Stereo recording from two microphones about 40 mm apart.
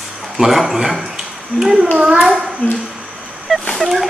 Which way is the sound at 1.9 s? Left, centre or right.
Right.